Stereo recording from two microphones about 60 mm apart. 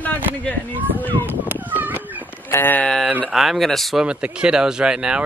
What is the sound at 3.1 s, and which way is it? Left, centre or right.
Speech, right.